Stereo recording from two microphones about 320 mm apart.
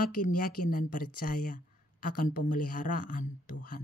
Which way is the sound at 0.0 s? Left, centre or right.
Left.